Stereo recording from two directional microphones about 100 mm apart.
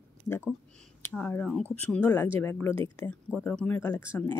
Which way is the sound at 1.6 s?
15° left (ahead or behind).